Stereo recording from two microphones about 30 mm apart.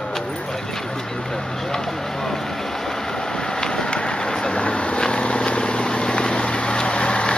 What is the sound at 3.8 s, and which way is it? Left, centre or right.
Vehicle, left.